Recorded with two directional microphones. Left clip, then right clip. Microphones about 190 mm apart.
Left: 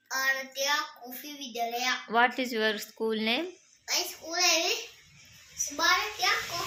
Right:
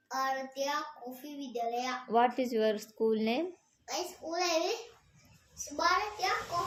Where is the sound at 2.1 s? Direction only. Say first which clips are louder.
Left 1 dB; centre (ahead or behind).